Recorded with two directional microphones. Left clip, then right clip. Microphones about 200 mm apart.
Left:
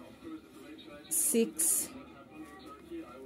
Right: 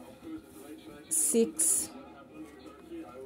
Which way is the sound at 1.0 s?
Centre (ahead or behind).